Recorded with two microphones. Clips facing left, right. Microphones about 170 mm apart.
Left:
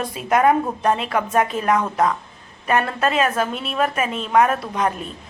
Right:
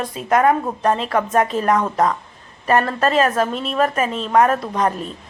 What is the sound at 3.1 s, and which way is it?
A woman's voice, centre (ahead or behind).